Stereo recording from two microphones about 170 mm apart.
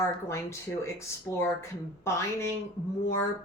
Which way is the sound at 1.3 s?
15° left (ahead or behind).